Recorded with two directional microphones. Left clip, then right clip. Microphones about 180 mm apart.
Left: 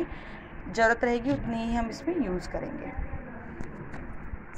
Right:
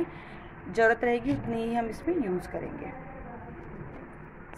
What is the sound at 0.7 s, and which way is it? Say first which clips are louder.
A woman's voice: even; 15° right (ahead or behind).